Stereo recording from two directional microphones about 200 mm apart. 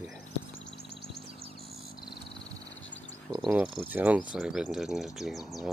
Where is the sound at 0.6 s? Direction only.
65° left (ahead or behind).